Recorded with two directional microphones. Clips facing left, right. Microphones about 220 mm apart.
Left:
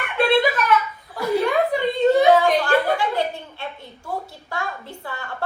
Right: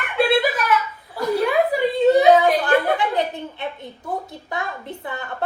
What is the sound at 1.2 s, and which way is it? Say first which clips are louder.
Chuckle: even; 10° left (ahead or behind).